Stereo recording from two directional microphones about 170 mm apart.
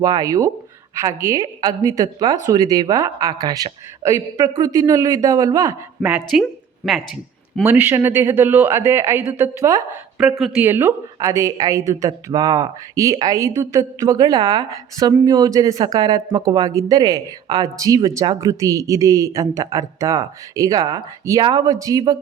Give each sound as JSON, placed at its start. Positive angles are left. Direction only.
{"t": 0.0, "sound": "speech", "side_deg": -20}
{"t": 6.1, "sound": "speech", "side_deg": -10}
{"t": 6.4, "sound": "a sound", "side_deg": 0}
{"t": 7.6, "sound": "speech", "side_deg": -10}
{"t": 10.2, "sound": "speech", "side_deg": 0}
{"t": 10.6, "sound": "speech", "side_deg": -15}